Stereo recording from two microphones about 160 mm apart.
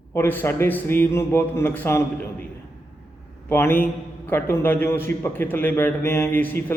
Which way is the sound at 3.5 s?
15° left (ahead or behind).